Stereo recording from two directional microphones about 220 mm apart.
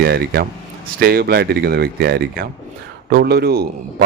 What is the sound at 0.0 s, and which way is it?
A man's voice, 45° right (ahead or behind).